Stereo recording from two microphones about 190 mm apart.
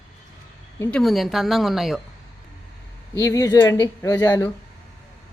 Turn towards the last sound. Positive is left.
turn(degrees=20)  # may be behind; listen again after turning